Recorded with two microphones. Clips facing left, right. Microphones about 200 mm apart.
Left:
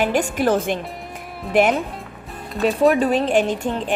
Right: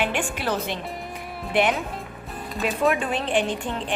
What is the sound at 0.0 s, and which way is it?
Speech, 40° left (ahead or behind).